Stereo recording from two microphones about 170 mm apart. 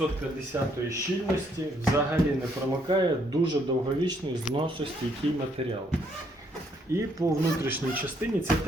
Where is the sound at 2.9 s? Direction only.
25° right (ahead or behind).